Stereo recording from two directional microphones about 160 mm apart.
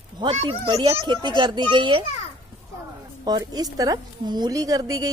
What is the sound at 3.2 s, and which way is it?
Speech, 25° right (ahead or behind).